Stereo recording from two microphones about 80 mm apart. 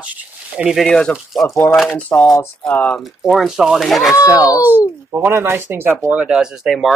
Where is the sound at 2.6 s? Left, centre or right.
Centre.